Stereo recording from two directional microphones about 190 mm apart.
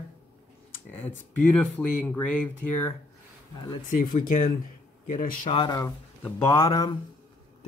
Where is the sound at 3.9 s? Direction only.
45° left (ahead or behind).